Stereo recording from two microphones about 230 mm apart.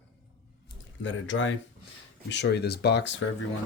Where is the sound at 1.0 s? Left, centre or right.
Left.